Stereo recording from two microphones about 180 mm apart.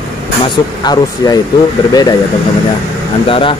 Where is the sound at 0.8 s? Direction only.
25° left (ahead or behind).